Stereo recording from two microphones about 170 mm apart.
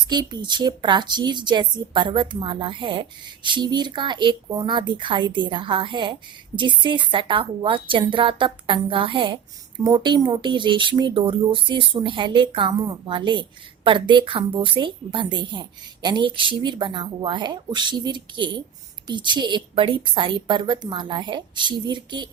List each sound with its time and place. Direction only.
0.1 s a woman's voice: 25° right (ahead or behind)